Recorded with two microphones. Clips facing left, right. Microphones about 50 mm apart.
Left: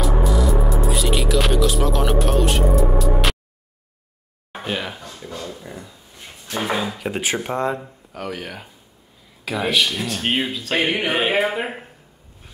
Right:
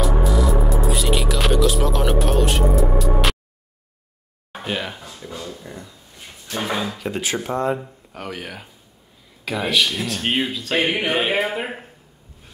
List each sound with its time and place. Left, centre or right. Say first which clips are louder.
0.0 s music: even; centre
4.5 s speech: even; centre
7.1 s speech: left 2 dB; centre
8.3 s speech: even; centre